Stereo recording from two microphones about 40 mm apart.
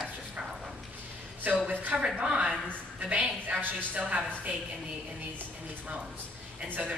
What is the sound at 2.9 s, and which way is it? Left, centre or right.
A woman's voice, right.